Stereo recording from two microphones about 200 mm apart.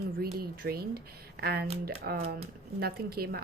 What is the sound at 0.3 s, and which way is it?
Speech, 50° right (ahead or behind).